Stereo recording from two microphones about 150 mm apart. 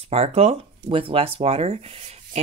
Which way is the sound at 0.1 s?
40° right (ahead or behind).